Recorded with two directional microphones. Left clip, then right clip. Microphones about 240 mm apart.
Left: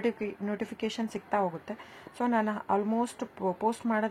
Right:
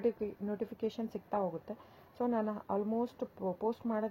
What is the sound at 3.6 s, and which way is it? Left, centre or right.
Speech, centre.